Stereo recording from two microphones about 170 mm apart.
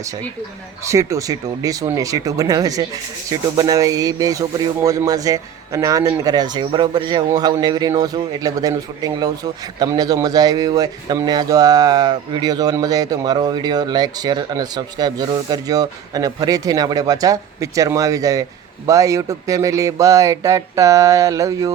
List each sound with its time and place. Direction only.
0.9 s a man's voice: 15° right (ahead or behind)